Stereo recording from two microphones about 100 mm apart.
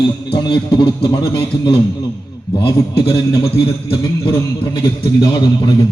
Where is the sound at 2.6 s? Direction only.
40° left (ahead or behind).